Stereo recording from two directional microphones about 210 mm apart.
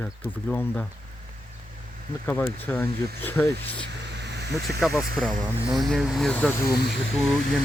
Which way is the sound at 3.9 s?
55° right (ahead or behind).